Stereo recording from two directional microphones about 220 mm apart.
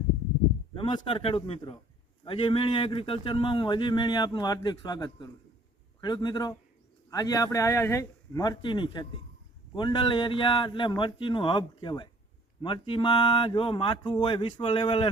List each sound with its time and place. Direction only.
0.7 s speech: 20° left (ahead or behind)